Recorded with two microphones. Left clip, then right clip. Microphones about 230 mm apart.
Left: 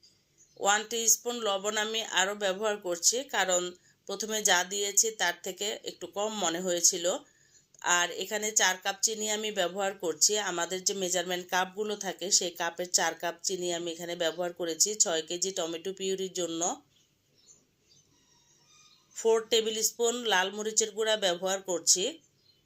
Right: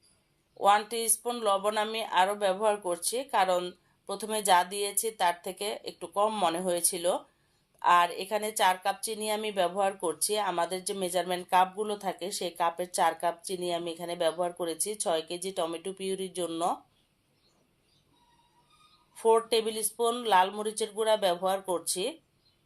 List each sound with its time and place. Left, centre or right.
0.6 s speech: centre
19.1 s speech: centre